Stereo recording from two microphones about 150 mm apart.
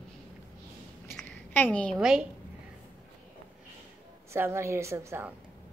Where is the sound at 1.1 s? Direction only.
10° left (ahead or behind).